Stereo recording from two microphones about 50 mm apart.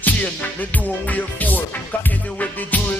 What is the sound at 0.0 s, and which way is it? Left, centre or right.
Music, left.